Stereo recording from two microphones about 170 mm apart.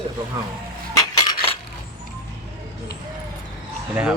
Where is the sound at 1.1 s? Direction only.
25° left (ahead or behind).